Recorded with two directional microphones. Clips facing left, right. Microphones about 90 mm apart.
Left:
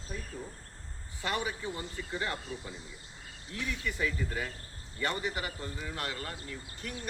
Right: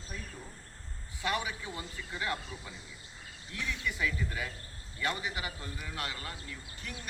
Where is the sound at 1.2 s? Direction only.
35° left (ahead or behind).